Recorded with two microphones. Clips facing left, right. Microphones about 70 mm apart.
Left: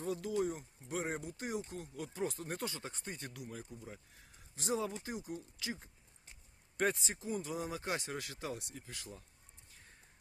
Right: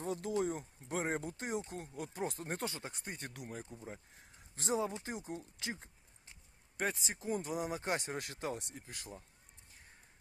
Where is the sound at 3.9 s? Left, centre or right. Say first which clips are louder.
Right 3 dB; right.